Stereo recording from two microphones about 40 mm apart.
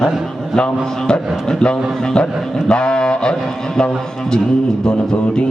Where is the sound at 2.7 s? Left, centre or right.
Left.